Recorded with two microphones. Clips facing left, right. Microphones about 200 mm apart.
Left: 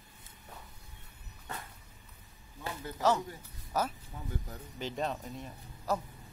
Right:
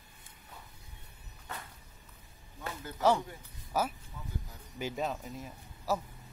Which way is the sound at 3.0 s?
10° right (ahead or behind).